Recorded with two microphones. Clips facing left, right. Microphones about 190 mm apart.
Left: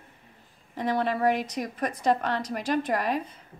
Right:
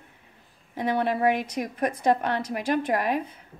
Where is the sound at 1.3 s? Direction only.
55° right (ahead or behind).